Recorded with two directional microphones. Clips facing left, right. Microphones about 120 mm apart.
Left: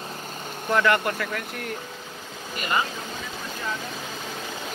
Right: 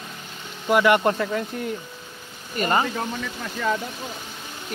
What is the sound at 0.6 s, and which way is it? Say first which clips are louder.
Speech: right 4 dB; 15° right (ahead or behind).